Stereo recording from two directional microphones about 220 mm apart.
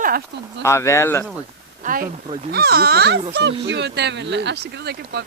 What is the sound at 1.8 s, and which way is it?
Speech, 35° right (ahead or behind).